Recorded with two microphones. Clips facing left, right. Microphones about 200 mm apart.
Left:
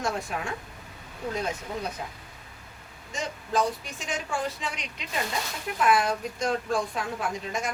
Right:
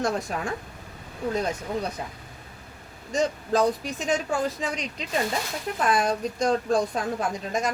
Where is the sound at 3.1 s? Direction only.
35° right (ahead or behind).